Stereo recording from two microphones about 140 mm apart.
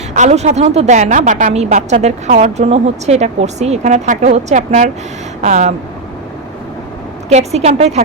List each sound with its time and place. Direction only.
0.1 s a woman's voice: 55° right (ahead or behind)
1.5 s a woman's voice: 50° right (ahead or behind)
7.3 s a woman's voice: 50° right (ahead or behind)